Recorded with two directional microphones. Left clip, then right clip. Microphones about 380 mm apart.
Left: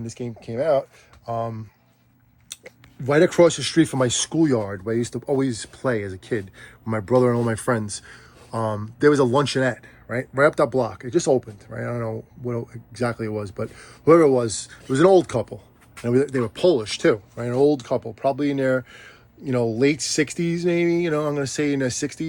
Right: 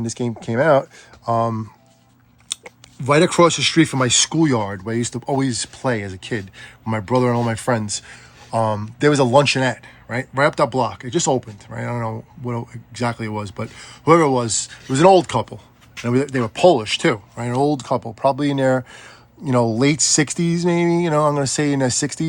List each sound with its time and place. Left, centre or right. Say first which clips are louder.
0.6 s speech: right 5 dB; right
2.5 s speech: right 9 dB; centre